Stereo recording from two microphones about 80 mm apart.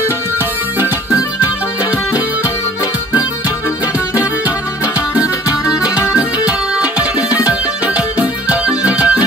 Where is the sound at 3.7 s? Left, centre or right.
Centre.